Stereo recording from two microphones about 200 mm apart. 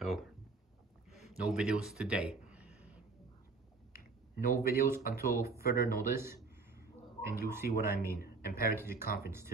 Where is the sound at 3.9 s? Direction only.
45° left (ahead or behind).